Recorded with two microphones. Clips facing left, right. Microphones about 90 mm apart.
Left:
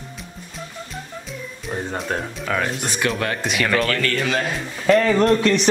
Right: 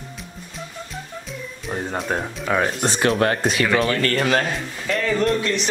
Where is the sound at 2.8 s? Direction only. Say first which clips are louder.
Right 4 dB; 35° right (ahead or behind).